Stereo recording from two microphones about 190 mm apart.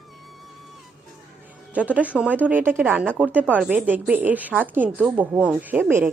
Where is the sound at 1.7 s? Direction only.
5° right (ahead or behind).